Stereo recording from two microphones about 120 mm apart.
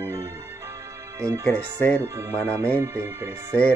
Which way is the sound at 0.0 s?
25° right (ahead or behind).